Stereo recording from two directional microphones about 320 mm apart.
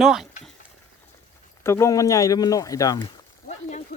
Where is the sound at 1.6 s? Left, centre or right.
Centre.